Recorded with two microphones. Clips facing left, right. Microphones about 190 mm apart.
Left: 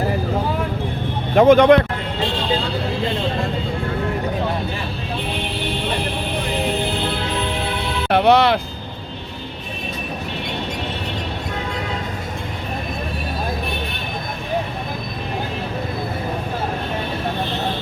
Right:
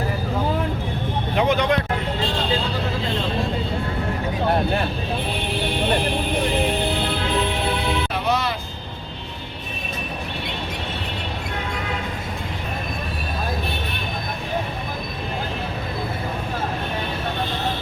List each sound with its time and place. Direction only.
1.4 s speech: 50° left (ahead or behind)
8.1 s music: 65° left (ahead or behind)